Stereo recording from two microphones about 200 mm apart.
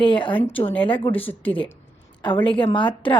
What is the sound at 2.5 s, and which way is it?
Speech, 25° left (ahead or behind).